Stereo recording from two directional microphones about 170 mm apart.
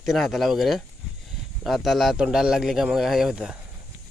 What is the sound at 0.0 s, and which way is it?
A man's voice, centre (ahead or behind).